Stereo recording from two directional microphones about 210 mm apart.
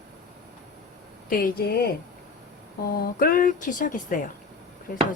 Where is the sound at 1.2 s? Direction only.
40° left (ahead or behind).